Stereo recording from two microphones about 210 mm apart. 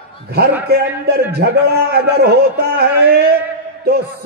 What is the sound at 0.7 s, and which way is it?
A man's voice, 50° right (ahead or behind).